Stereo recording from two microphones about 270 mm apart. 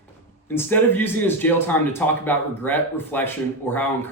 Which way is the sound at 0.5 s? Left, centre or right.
Centre.